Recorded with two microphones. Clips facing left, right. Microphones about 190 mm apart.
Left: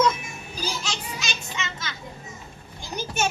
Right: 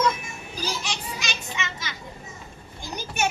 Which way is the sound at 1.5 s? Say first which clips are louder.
Even; 15° right (ahead or behind).